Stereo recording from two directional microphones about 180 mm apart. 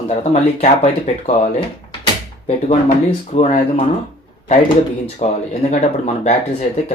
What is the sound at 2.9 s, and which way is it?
Speech, 45° left (ahead or behind).